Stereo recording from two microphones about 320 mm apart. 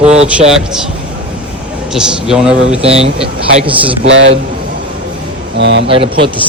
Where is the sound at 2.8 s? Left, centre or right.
Centre.